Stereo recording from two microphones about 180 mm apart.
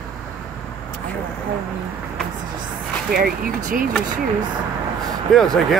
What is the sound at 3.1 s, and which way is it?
Speech, 50° right (ahead or behind).